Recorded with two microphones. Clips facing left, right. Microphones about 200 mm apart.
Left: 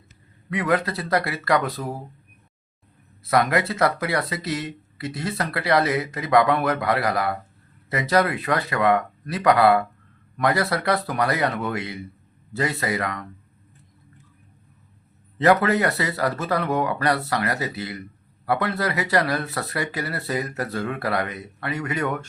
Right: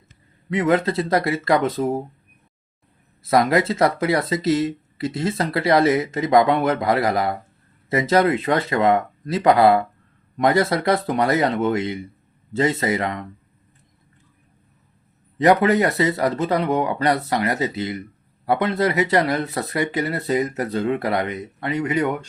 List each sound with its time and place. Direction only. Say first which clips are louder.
0.5 s speech: right 4 dB; 25° right (ahead or behind)
3.2 s speech: right 3 dB; 25° right (ahead or behind)
15.4 s speech: right 3 dB; 20° right (ahead or behind)